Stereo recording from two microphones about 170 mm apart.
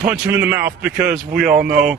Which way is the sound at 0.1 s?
15° right (ahead or behind).